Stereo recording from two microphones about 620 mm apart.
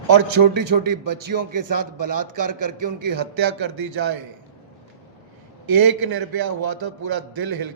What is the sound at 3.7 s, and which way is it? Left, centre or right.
Speech, right.